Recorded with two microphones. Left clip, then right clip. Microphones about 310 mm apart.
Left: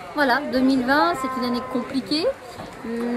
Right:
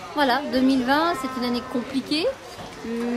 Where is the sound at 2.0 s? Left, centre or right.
Centre.